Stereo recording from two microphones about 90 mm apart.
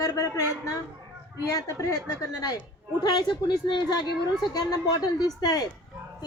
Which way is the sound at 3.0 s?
55° left (ahead or behind).